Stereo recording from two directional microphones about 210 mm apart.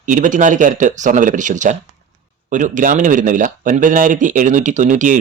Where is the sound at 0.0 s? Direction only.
40° right (ahead or behind).